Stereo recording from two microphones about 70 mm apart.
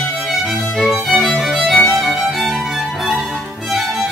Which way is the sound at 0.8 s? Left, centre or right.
Centre.